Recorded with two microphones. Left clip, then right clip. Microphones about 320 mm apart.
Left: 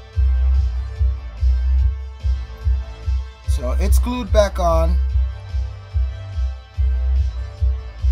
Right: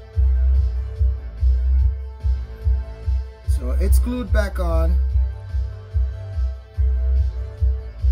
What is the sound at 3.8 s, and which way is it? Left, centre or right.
Speech, centre.